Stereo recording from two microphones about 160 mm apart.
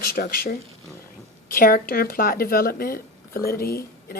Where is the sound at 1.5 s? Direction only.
65° left (ahead or behind).